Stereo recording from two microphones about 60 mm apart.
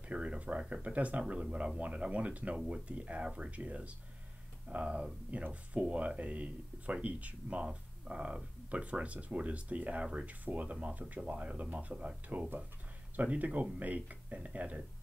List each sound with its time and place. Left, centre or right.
0.1 s speech: centre